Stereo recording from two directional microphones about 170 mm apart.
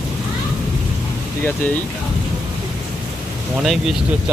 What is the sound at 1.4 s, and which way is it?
Speech, 10° left (ahead or behind).